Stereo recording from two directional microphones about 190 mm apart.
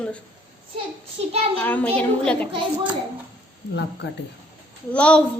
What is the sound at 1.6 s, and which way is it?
Speech, 10° left (ahead or behind).